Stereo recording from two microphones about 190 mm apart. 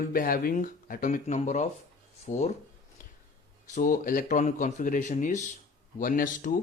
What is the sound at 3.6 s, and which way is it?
Speech, 40° left (ahead or behind).